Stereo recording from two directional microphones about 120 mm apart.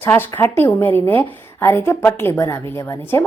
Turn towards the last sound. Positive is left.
turn(degrees=25)  # may be behind; listen again after turning